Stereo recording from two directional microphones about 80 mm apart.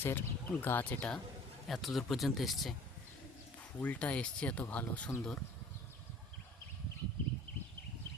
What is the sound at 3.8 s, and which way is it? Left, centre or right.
Speech, centre.